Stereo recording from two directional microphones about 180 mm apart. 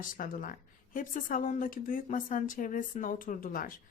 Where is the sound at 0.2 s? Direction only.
50° left (ahead or behind).